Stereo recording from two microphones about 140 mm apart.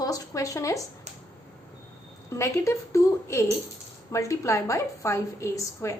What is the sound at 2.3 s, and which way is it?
A woman's voice, 20° left (ahead or behind).